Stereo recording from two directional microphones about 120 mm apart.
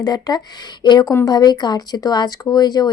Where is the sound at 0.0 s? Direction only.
35° left (ahead or behind).